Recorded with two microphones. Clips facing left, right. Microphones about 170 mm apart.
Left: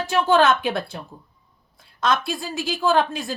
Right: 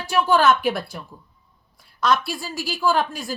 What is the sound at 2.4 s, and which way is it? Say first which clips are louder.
Speech: left 1 dB; 55° left (ahead or behind).